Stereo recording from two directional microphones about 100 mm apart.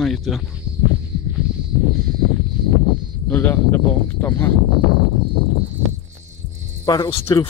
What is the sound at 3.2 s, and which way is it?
Speech, 20° left (ahead or behind).